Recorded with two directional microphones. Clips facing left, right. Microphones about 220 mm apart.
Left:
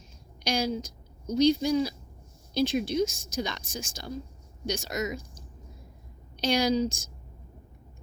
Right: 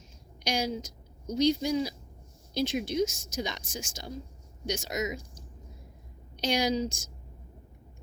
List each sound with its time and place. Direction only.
0.4 s a woman's voice: 20° right (ahead or behind)
6.4 s speech: 20° right (ahead or behind)